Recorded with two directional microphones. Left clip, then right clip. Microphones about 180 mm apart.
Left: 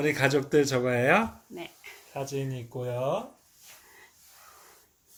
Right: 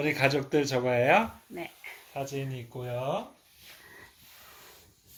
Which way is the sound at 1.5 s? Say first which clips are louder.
Right 2 dB; 25° right (ahead or behind).